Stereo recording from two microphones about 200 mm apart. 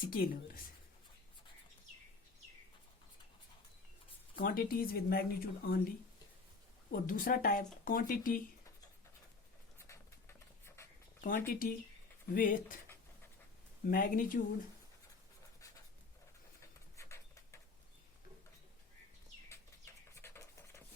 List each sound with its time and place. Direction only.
0.1 s speech: 45° left (ahead or behind)
4.4 s speech: 45° left (ahead or behind)
6.9 s speech: 45° left (ahead or behind)
9.7 s pigeon: 15° left (ahead or behind)
10.8 s writing: 15° left (ahead or behind)
11.2 s speech: 45° left (ahead or behind)
13.8 s speech: 45° left (ahead or behind)
17.0 s a sound: 15° left (ahead or behind)
20.1 s a sound: 15° left (ahead or behind)